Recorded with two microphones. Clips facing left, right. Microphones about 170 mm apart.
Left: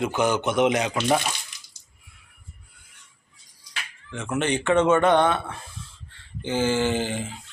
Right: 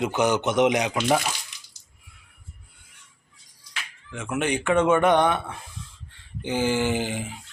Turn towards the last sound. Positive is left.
turn(degrees=-15)  # may be behind; listen again after turning